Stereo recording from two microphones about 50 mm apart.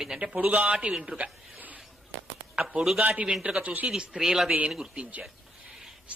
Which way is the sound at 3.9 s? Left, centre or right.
Centre.